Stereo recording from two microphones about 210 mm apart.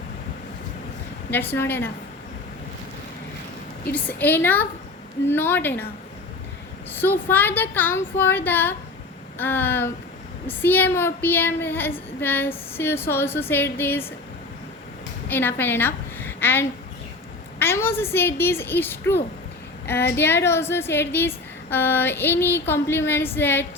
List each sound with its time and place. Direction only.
1.5 s a woman's voice: 10° left (ahead or behind)
3.9 s a woman's voice: 10° left (ahead or behind)
6.9 s a woman's voice: 10° left (ahead or behind)
15.3 s a woman's voice: 10° left (ahead or behind)